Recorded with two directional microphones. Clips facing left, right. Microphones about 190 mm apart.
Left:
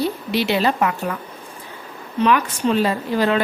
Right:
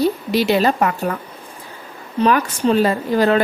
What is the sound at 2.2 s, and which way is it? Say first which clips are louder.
Speech: right 2 dB; 40° right (ahead or behind).